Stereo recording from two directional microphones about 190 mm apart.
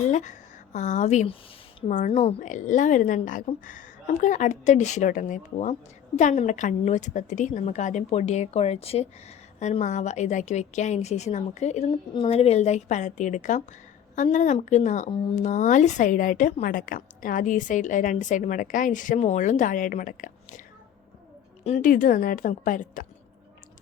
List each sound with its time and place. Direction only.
0.1 s a woman's voice: 40° left (ahead or behind)
21.6 s a woman's voice: 40° left (ahead or behind)